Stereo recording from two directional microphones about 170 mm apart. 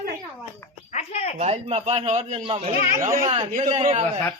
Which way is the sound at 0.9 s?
40° left (ahead or behind).